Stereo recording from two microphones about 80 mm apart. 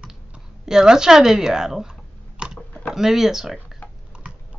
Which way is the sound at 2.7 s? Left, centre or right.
Centre.